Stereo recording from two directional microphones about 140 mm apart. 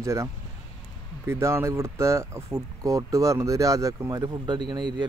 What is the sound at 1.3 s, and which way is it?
Speech, 20° right (ahead or behind).